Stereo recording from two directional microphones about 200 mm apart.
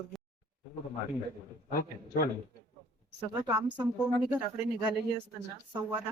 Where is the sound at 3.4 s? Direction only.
15° right (ahead or behind).